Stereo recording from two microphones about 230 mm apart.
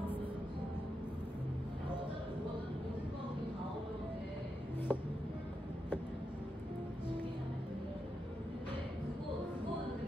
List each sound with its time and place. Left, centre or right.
4.9 s music: centre